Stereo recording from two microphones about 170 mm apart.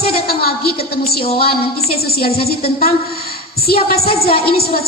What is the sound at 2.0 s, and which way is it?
A woman's voice, 65° left (ahead or behind).